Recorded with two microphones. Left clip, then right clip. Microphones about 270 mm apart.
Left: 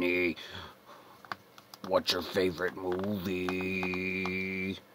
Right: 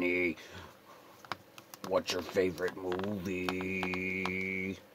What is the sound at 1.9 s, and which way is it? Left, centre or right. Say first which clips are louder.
Speech: left 2 dB; left.